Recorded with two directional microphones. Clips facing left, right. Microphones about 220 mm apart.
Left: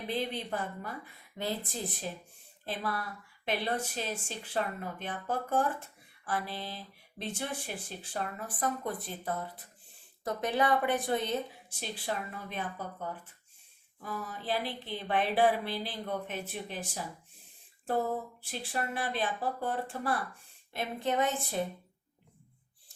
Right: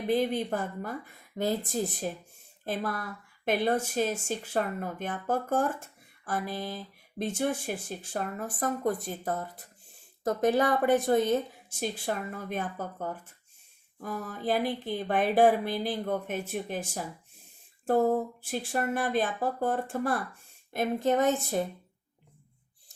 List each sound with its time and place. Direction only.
0.1 s speech: 50° right (ahead or behind)
18.5 s speech: 45° right (ahead or behind)